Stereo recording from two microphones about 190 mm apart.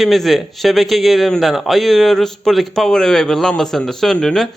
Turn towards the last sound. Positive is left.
turn(degrees=0)  # may be behind; listen again after turning